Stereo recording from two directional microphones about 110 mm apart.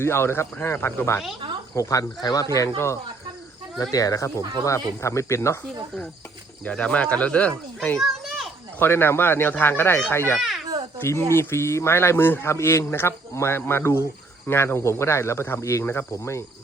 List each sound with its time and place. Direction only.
0.0 s a man's voice: 20° left (ahead or behind)
6.7 s speech: 10° left (ahead or behind)
7.9 s children playing: centre (ahead or behind)
8.8 s a man's voice: 20° left (ahead or behind)
10.4 s babbling: centre (ahead or behind)
11.0 s a man's voice: 25° left (ahead or behind)